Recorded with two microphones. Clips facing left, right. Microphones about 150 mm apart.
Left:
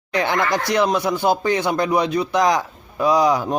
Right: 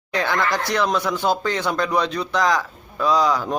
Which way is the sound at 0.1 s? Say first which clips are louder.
Left 2 dB; 15° left (ahead or behind).